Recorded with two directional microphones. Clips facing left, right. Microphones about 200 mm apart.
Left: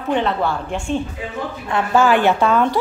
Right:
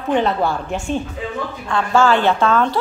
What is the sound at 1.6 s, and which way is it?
A woman's voice, 20° left (ahead or behind).